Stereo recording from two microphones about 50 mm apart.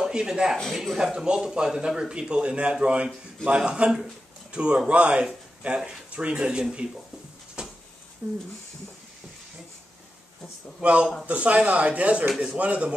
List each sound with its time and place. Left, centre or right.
0.0 s a man's voice: centre
7.6 s a sound: centre
8.2 s speech: right
10.8 s speech: right